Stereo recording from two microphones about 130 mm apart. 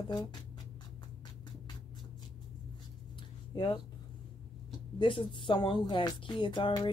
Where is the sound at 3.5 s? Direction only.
35° left (ahead or behind).